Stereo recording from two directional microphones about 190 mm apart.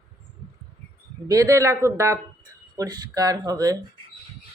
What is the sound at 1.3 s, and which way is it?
Speech, 15° right (ahead or behind).